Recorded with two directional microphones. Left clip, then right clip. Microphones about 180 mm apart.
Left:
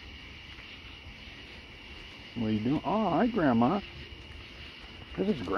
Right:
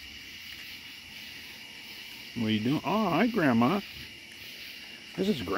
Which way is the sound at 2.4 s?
50° right (ahead or behind).